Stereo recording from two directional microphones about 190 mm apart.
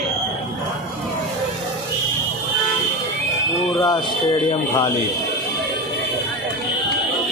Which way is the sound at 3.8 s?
25° left (ahead or behind).